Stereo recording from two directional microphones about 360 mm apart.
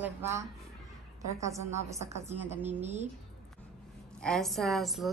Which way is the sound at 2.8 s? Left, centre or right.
Centre.